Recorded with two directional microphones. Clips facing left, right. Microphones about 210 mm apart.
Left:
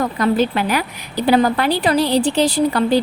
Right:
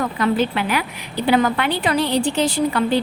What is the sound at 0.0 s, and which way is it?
Speech, 40° left (ahead or behind).